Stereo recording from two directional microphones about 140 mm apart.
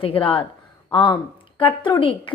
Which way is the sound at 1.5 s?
40° left (ahead or behind).